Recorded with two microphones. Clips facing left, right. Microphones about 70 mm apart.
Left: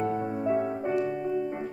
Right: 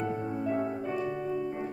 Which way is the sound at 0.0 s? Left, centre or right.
Left.